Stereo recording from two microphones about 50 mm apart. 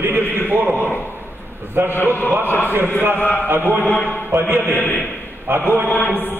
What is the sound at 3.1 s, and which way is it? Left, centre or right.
Speech, left.